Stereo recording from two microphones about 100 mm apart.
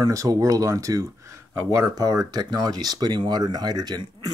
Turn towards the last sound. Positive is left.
turn(degrees=-40)  # may be behind; listen again after turning